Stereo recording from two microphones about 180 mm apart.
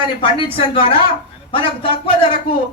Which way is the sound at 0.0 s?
30° left (ahead or behind).